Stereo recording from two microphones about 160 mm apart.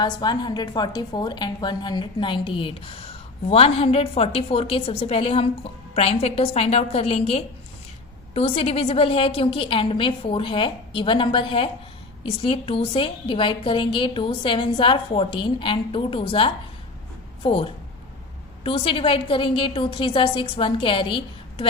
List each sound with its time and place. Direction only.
0.0 s a woman's voice: 25° left (ahead or behind)